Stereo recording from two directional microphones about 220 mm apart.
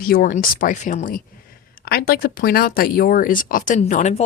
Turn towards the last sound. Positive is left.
turn(degrees=35)  # may be behind; listen again after turning